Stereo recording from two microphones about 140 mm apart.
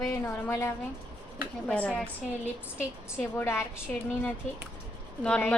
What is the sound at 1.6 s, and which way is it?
A woman's voice, 10° left (ahead or behind).